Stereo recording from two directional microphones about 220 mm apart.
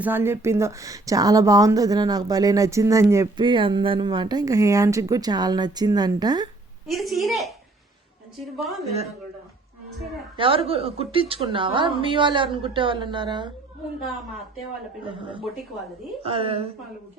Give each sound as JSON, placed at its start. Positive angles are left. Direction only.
{"t": 0.0, "sound": "speech", "side_deg": -10}
{"t": 6.8, "sound": "a woman's voice", "side_deg": 0}
{"t": 10.3, "sound": "a woman's voice", "side_deg": -25}
{"t": 16.2, "sound": "a woman's voice", "side_deg": -25}